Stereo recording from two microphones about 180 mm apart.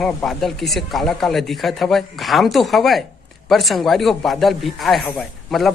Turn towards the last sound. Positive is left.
turn(degrees=0)  # may be behind; listen again after turning